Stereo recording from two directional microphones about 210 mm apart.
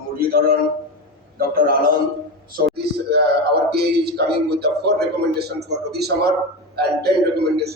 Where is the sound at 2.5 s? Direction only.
45° right (ahead or behind).